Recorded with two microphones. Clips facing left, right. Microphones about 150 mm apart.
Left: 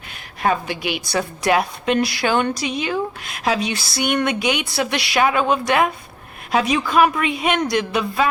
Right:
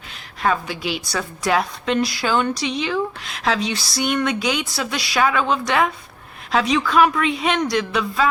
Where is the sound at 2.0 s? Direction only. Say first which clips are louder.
Even; 65° left (ahead or behind).